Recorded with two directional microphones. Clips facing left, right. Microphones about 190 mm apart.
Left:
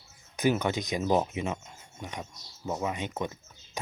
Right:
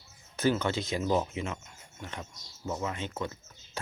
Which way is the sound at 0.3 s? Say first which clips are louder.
Left 1 dB; 15° left (ahead or behind).